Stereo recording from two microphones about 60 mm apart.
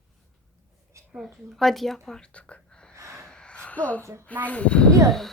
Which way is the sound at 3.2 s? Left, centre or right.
Centre.